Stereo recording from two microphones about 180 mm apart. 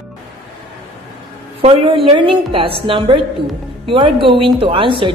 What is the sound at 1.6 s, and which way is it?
A woman's voice, 30° right (ahead or behind).